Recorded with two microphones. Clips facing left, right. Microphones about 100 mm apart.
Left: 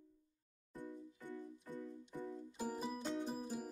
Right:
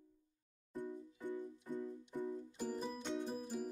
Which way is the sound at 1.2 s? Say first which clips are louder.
Right 6 dB; 15° right (ahead or behind).